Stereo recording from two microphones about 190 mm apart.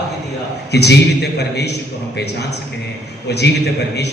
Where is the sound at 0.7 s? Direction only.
60° left (ahead or behind).